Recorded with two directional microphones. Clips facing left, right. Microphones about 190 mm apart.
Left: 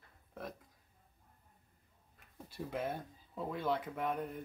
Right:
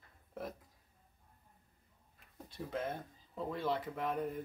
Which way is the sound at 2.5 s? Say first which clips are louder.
Left 1 dB; 10° left (ahead or behind).